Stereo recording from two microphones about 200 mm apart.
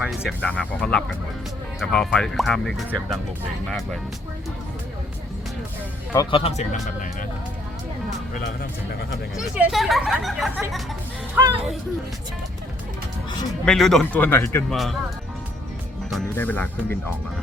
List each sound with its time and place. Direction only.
0.3 s speech: 5° left (ahead or behind)
6.1 s speech: 30° left (ahead or behind)
9.3 s speech: 5° right (ahead or behind)
11.4 s speech: 10° right (ahead or behind)
13.7 s speech: centre (ahead or behind)
14.7 s speech: centre (ahead or behind)
16.0 s speech: 5° left (ahead or behind)